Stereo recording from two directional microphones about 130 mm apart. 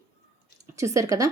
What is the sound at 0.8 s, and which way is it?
Speech, 25° right (ahead or behind).